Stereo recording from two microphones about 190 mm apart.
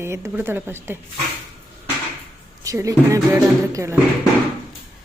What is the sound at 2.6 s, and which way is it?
Speech, 15° right (ahead or behind).